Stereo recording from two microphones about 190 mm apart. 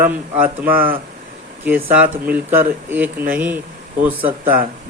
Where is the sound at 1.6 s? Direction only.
10° right (ahead or behind).